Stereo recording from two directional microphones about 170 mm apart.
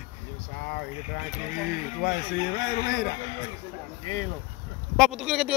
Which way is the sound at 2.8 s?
70° left (ahead or behind).